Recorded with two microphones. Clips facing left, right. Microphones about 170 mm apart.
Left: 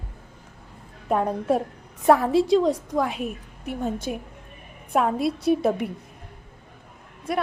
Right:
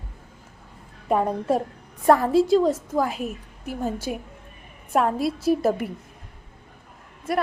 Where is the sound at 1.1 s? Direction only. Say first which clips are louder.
Even; centre (ahead or behind).